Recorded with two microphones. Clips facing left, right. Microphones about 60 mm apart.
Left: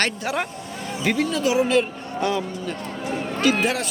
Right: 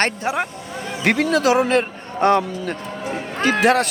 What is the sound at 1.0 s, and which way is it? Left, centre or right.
Speech, right.